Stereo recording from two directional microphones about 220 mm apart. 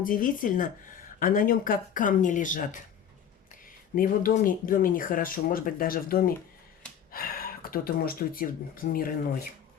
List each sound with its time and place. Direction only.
0.0 s speech: 40° left (ahead or behind)
3.9 s speech: 40° left (ahead or behind)